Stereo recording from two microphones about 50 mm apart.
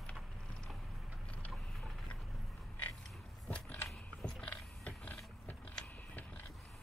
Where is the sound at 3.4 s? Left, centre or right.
Left.